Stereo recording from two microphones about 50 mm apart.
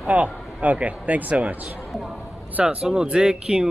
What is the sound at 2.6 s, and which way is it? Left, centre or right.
Speech, centre.